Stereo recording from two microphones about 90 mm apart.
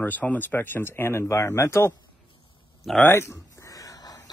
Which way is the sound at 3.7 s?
40° left (ahead or behind).